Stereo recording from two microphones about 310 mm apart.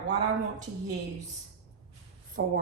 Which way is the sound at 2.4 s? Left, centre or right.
Right.